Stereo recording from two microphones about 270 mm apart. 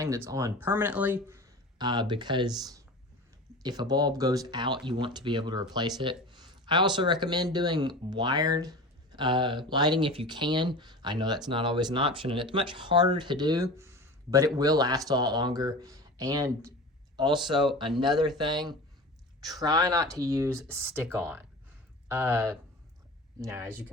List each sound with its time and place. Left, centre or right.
0.3 s speech: centre